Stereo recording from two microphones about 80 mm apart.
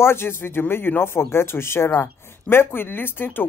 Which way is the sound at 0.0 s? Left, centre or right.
Left.